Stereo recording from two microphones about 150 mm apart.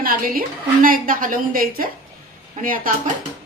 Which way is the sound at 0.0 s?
70° right (ahead or behind).